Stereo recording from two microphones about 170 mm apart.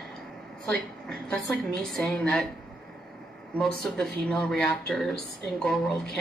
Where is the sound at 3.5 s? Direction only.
5° left (ahead or behind).